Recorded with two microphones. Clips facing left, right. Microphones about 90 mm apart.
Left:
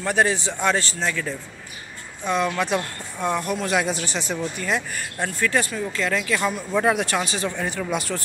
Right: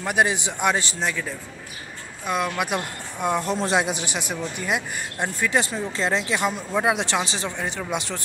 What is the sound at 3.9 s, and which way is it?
Speech, 15° right (ahead or behind).